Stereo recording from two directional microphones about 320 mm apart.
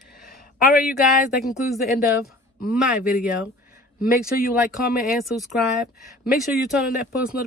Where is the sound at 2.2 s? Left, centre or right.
Left.